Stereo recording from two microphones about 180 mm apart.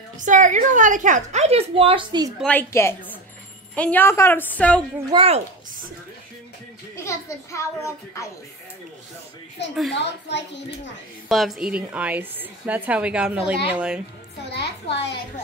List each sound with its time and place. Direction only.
0.2 s a woman's voice: 45° right (ahead or behind); by 2.3 s 25° right (ahead or behind)
2.4 s a child's voice: 10° left (ahead or behind)
5.1 s speech: 35° right (ahead or behind)
7.0 s a child's voice: 15° left (ahead or behind)
9.9 s a child's voice: 75° left (ahead or behind)
11.2 s a woman's voice: centre (ahead or behind)
14.5 s a child's voice: 70° left (ahead or behind)